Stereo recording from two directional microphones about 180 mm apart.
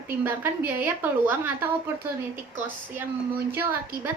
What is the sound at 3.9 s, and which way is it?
Speech, 55° right (ahead or behind).